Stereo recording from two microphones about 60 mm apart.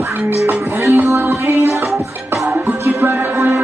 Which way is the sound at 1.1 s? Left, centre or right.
Right.